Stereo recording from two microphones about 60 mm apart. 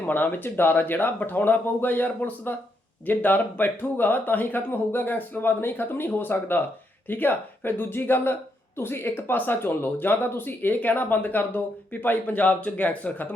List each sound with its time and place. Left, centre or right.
0.0 s speech: left